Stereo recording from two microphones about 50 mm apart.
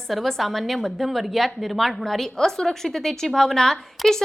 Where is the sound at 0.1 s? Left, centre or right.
Centre.